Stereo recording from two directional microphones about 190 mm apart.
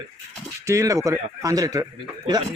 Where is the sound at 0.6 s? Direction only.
15° right (ahead or behind).